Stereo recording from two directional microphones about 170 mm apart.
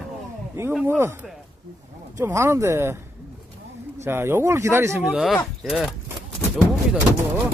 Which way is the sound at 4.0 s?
15° right (ahead or behind).